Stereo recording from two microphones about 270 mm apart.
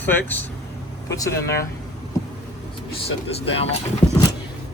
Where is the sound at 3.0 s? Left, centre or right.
Left.